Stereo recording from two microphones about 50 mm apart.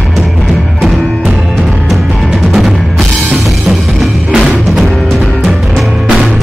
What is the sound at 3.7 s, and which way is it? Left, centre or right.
Music, right.